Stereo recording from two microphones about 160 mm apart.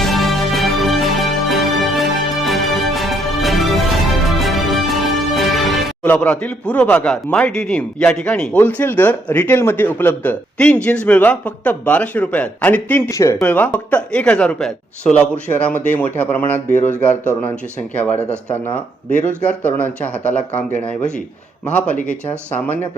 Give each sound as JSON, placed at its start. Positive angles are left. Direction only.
{"t": 0.0, "sound": "music", "side_deg": 0}
{"t": 6.0, "sound": "speech", "side_deg": 10}
{"t": 18.1, "sound": "speech", "side_deg": 45}
{"t": 19.4, "sound": "speech", "side_deg": 10}